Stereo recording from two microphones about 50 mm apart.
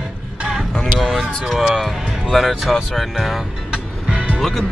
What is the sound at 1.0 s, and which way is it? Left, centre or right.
Speech, centre.